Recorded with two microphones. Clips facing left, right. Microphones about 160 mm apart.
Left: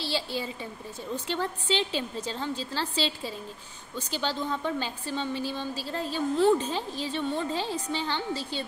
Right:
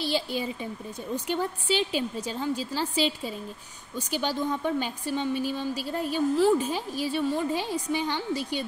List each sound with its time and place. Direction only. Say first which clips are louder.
0.0 s a woman's voice: right 3 dB; 15° right (ahead or behind)